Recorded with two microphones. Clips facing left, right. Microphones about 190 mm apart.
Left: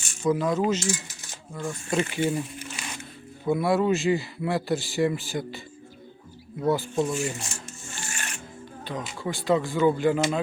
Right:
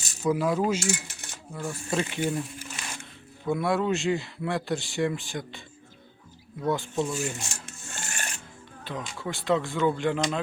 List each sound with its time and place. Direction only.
0.2 s speech: 5° right (ahead or behind)
0.9 s coin: 65° right (ahead or behind)
1.5 s speech: 5° right (ahead or behind)
7.9 s music: 50° right (ahead or behind)
8.8 s speech: centre (ahead or behind)